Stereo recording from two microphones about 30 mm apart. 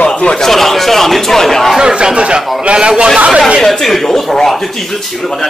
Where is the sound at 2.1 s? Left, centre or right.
Right.